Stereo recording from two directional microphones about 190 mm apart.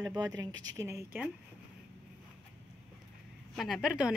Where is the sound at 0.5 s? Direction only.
90° right.